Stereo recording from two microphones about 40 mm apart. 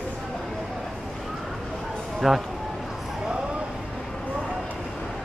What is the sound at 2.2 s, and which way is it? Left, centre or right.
Speech, centre.